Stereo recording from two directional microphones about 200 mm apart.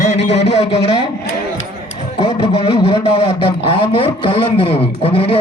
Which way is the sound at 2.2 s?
30° left (ahead or behind).